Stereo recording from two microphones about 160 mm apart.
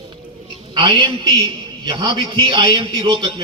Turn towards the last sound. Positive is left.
turn(degrees=-30)  # may be behind; listen again after turning